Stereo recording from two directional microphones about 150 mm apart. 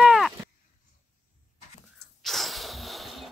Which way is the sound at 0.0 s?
Centre (ahead or behind).